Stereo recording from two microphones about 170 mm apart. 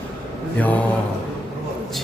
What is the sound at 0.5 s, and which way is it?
Mantra, 10° left (ahead or behind).